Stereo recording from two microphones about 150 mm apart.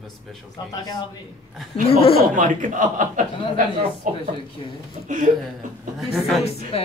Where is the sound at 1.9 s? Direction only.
40° left (ahead or behind).